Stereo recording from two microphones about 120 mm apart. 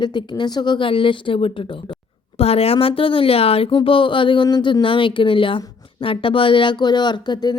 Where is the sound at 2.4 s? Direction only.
55° left (ahead or behind).